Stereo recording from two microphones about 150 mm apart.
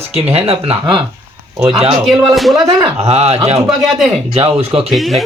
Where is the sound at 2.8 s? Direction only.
40° right (ahead or behind).